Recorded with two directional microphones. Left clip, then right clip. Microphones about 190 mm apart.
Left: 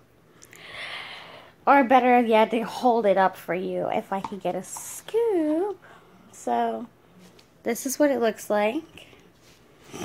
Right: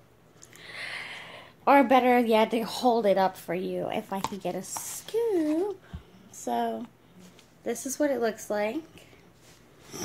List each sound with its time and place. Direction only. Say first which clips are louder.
0.5 s speech: left 2 dB; 10° left (ahead or behind)
7.6 s a woman's voice: left 5 dB; 35° left (ahead or behind)